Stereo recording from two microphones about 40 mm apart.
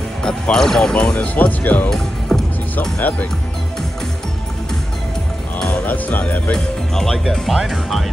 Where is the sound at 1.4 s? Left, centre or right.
Left.